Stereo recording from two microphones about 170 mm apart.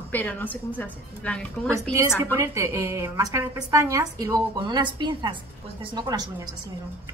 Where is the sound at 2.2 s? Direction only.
15° right (ahead or behind).